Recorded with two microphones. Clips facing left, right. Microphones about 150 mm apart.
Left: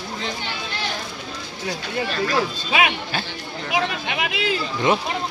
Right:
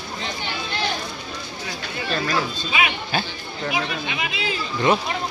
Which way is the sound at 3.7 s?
70° left (ahead or behind).